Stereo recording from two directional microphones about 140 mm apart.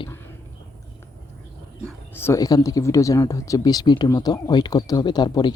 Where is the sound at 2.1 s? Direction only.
20° left (ahead or behind).